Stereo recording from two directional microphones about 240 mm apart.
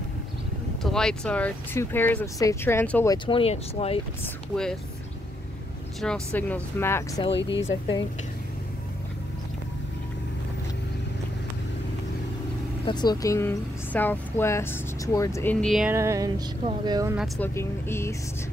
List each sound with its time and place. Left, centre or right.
0.8 s speech: centre
3.3 s speech: left
5.9 s speech: centre
7.2 s speech: left
12.8 s speech: centre
17.2 s speech: centre